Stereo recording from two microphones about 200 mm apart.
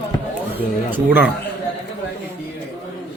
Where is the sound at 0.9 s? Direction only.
10° right (ahead or behind).